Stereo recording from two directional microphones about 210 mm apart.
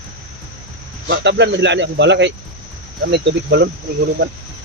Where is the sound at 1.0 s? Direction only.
55° right (ahead or behind).